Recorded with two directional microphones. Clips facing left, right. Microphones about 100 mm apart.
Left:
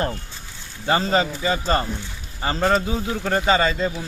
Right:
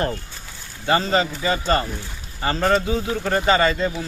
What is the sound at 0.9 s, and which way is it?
A man's voice, 25° left (ahead or behind).